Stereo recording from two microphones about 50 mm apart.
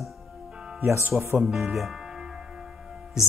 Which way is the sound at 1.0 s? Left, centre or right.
Right.